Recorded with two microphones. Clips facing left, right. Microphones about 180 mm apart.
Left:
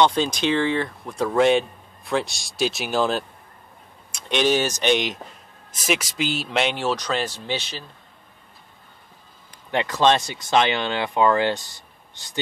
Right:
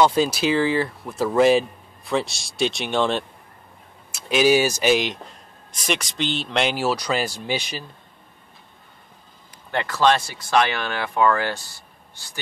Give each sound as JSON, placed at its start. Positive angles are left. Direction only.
{"t": 0.0, "sound": "speech", "side_deg": -5}
{"t": 9.7, "sound": "speech", "side_deg": 20}